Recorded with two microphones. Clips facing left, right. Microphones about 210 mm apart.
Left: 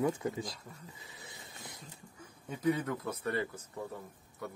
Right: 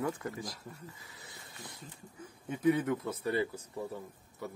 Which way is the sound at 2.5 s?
5° right (ahead or behind).